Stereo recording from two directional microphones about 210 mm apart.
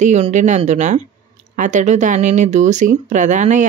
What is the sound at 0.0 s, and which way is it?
Speech, 35° right (ahead or behind).